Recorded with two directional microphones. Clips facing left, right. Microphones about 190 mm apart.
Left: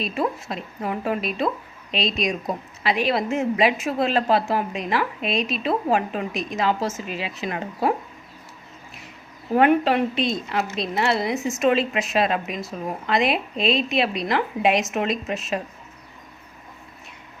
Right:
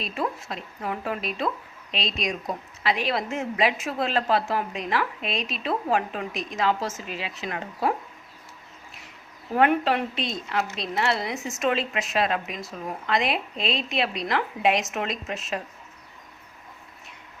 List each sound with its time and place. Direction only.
0.0 s a woman's voice: 15° left (ahead or behind)
9.6 s a woman's voice: 15° left (ahead or behind)